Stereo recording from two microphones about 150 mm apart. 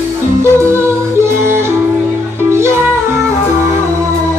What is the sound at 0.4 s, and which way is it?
Yodeling, 15° right (ahead or behind).